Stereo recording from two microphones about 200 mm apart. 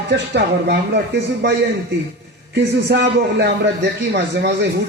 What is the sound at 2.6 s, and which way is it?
A man's voice, 55° right (ahead or behind).